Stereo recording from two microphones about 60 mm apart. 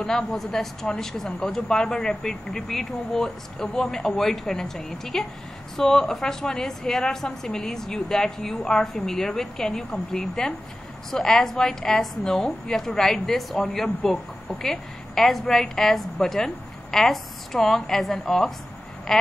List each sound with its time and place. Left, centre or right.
0.0 s a woman's voice: centre
2.0 s speech: centre
2.5 s a woman's voice: centre
19.1 s a sound: centre